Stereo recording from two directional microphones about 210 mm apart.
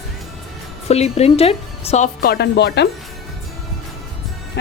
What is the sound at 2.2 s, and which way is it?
Speech, 50° left (ahead or behind).